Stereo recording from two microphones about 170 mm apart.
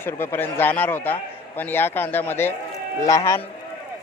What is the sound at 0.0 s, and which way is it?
A man's voice, 10° left (ahead or behind).